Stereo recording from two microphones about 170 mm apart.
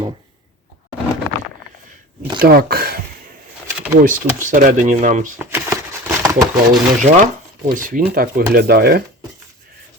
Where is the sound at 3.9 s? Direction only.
50° right (ahead or behind).